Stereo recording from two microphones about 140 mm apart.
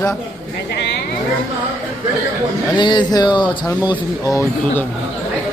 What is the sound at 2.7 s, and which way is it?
Speech, 35° left (ahead or behind).